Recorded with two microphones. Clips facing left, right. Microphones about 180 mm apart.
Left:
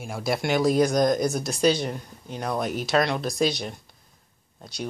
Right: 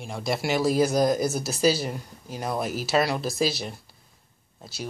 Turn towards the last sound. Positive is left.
turn(degrees=-5)  # may be behind; listen again after turning